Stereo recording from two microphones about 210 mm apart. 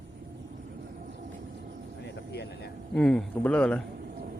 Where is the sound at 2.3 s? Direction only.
50° left (ahead or behind).